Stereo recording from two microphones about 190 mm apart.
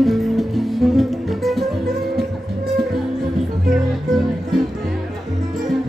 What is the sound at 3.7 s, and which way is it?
Music, centre (ahead or behind).